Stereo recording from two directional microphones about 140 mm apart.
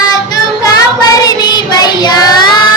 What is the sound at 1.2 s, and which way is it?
Child singing, 30° left (ahead or behind).